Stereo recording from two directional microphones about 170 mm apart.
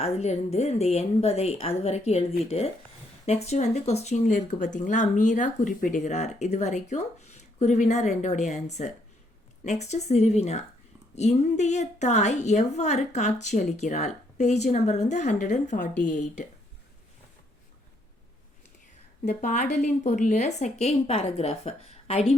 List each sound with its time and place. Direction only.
0.0 s a woman's voice: 40° left (ahead or behind)
19.2 s a woman's voice: 45° left (ahead or behind)